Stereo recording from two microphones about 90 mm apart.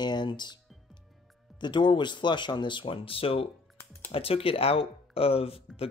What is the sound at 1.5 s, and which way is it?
Speech, 60° left (ahead or behind).